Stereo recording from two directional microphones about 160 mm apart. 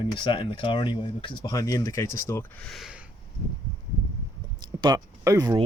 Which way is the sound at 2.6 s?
Centre (ahead or behind).